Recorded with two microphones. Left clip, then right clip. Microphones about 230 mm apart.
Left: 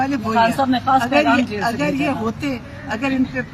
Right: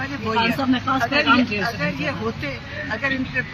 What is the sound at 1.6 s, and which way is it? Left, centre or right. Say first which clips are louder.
Speech: left 5 dB; left.